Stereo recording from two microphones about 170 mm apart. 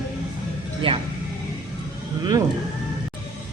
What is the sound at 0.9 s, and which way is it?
Speech, 35° right (ahead or behind).